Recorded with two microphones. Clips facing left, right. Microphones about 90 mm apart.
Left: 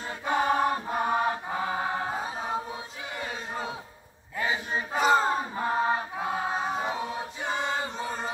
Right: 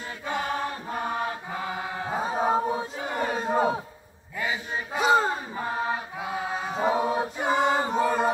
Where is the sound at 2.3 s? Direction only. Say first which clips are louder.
Right 8 dB; 45° right (ahead or behind).